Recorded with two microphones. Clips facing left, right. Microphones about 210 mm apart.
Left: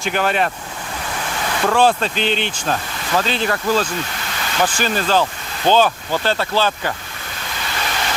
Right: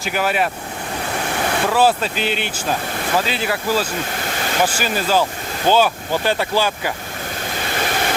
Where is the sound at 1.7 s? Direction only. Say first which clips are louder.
Left 2 dB; 5° right (ahead or behind).